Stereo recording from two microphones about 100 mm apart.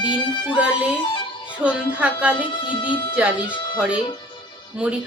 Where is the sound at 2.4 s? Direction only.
55° left (ahead or behind).